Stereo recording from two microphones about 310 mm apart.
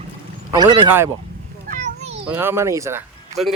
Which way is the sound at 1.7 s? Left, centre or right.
Centre.